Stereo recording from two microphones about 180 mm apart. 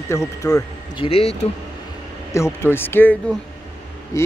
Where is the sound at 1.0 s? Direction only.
30° left (ahead or behind).